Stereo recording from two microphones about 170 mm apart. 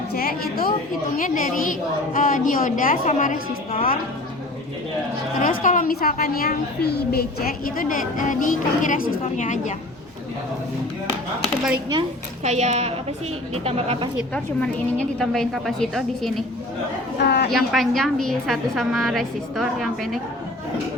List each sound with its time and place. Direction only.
0.1 s a woman's voice: 65° left (ahead or behind)
1.1 s a woman's voice: 50° left (ahead or behind)
5.4 s a woman's voice: 50° left (ahead or behind)
11.4 s a woman's voice: 5° right (ahead or behind)
11.9 s a woman's voice: 40° right (ahead or behind)
15.2 s a woman's voice: centre (ahead or behind)
17.2 s a woman's voice: 75° left (ahead or behind)
17.7 s a woman's voice: centre (ahead or behind)